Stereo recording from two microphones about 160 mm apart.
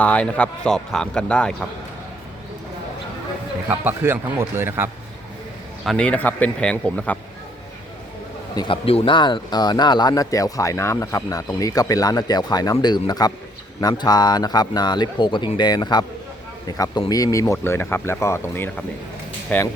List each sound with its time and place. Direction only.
0.0 s speech: 10° left (ahead or behind)
3.7 s a man's voice: 15° right (ahead or behind)
5.8 s speech: 5° left (ahead or behind)
8.5 s speech: 30° left (ahead or behind); by 19.6 s 10° left (ahead or behind)